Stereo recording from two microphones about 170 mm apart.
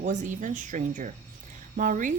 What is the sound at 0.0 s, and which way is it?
A woman's voice, 45° right (ahead or behind).